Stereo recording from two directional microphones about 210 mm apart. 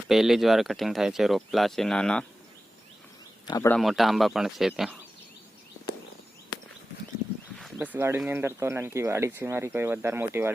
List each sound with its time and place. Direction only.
0.1 s speech: centre (ahead or behind)
3.4 s speech: 15° left (ahead or behind)
3.8 s speech: centre (ahead or behind)
7.6 s speech: 10° right (ahead or behind)